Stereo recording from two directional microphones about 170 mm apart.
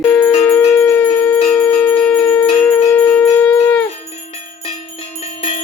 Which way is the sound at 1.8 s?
5° left (ahead or behind).